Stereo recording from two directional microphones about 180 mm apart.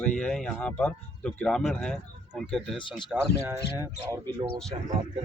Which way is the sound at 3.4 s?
15° right (ahead or behind).